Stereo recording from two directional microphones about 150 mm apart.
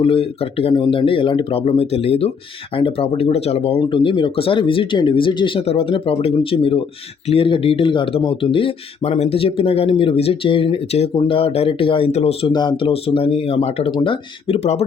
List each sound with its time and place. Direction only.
0.0 s speech: 40° left (ahead or behind)
12.5 s speech: 30° left (ahead or behind); by 14.8 s 45° left (ahead or behind)